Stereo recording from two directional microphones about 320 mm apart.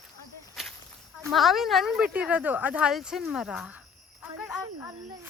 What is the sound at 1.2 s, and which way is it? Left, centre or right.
Speech, centre.